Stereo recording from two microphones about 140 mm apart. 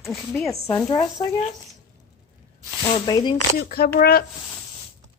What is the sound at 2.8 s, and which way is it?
Speech, 30° left (ahead or behind).